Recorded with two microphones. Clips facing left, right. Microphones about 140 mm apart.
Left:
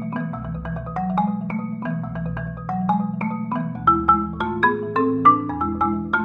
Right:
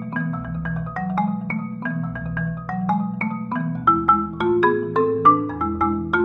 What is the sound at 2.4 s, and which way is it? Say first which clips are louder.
Marimba: right 1 dB; 25° left (ahead or behind).